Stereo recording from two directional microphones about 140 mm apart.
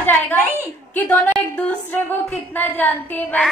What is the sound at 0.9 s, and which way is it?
A woman's voice, 15° left (ahead or behind).